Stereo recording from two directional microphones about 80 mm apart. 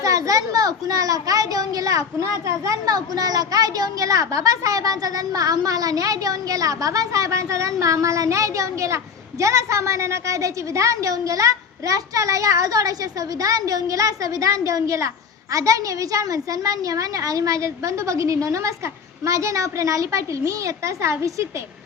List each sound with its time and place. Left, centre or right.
0.0 s a child's voice: right